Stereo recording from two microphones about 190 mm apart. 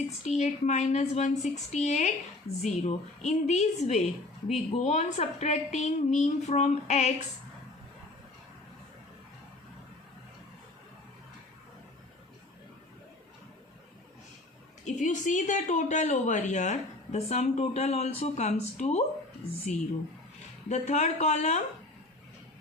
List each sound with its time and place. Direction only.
0.3 s speech: 40° left (ahead or behind)
14.8 s speech: 40° left (ahead or behind)